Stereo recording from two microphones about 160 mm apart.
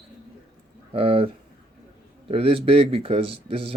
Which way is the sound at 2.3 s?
35° right (ahead or behind).